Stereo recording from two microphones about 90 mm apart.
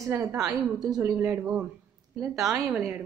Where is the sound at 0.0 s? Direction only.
35° right (ahead or behind).